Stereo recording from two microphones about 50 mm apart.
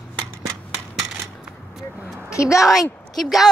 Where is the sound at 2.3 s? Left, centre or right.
Left.